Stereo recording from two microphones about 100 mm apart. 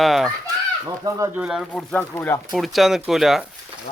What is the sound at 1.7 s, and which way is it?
Speech, 10° left (ahead or behind).